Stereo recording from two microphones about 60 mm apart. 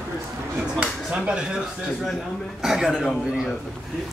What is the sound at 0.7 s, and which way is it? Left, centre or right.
Speech, right.